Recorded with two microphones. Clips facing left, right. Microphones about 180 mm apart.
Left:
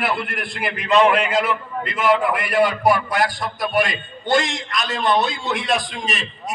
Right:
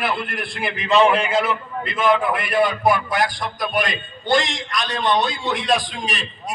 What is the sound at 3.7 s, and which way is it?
Speech, 25° left (ahead or behind).